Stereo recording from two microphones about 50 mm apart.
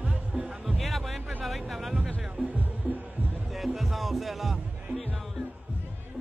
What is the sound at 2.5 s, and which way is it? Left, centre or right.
Music, right.